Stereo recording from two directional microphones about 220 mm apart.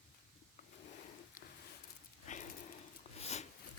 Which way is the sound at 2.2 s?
35° left (ahead or behind).